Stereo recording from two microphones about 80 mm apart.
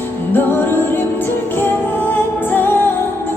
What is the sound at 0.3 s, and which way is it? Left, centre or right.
Music, left.